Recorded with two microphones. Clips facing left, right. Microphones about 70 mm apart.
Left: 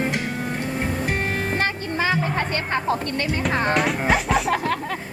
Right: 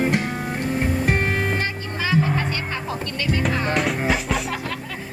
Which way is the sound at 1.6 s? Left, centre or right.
Left.